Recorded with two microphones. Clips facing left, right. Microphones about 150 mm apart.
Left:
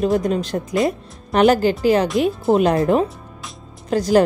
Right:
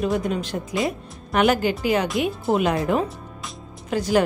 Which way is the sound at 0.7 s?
Centre (ahead or behind).